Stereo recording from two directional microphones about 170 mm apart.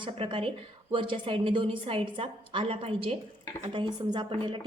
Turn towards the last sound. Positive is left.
turn(degrees=-30)  # may be behind; listen again after turning